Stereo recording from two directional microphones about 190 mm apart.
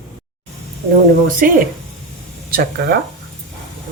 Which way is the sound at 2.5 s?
55° right (ahead or behind).